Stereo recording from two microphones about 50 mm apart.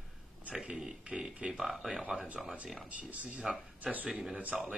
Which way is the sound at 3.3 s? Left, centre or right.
Centre.